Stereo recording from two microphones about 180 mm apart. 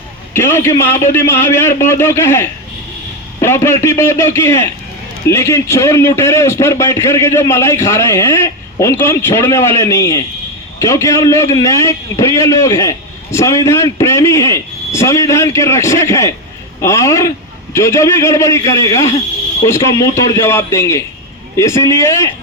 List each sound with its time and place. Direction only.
0.3 s a man's voice: 15° left (ahead or behind)